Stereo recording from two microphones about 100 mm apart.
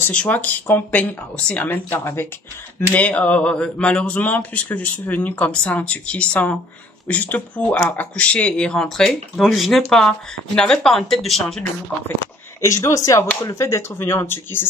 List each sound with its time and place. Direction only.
0.1 s speech: 15° left (ahead or behind)
12.6 s speech: 30° left (ahead or behind)